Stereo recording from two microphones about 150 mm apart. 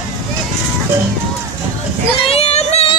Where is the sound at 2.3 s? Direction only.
45° left (ahead or behind).